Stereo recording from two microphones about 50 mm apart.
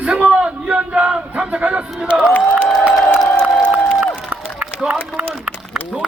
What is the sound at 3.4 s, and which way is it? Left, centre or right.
Crowd, left.